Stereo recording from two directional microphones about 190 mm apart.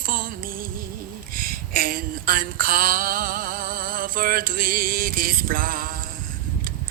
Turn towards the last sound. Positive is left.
turn(degrees=-45)  # may be behind; listen again after turning